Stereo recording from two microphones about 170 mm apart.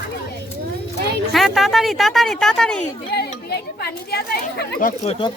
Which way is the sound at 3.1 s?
75° left (ahead or behind).